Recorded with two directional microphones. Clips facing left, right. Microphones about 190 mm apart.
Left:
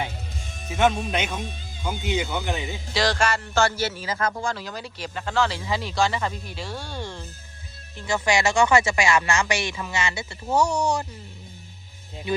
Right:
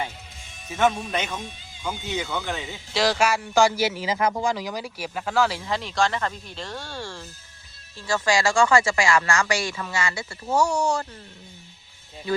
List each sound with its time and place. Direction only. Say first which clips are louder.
0.4 s music: left 7 dB; 45° left (ahead or behind)
0.7 s speech: left 1 dB; 10° left (ahead or behind)
2.9 s a man's voice: right 2 dB; 5° right (ahead or behind); by 11.0 s 20° left (ahead or behind)